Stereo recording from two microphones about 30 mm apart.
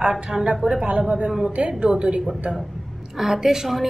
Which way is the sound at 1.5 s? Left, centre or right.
Right.